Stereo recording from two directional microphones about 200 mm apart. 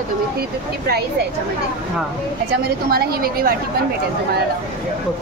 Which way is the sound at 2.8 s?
50° right (ahead or behind).